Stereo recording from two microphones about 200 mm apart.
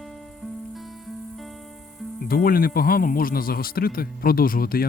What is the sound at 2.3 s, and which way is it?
Speech, 45° left (ahead or behind).